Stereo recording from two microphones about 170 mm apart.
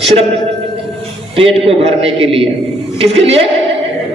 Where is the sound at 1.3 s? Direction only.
35° right (ahead or behind).